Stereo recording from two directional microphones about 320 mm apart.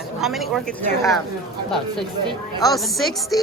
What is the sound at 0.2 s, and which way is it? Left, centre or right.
Speech, centre.